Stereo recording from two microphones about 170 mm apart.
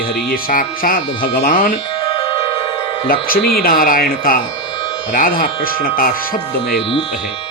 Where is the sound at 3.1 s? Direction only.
60° left (ahead or behind).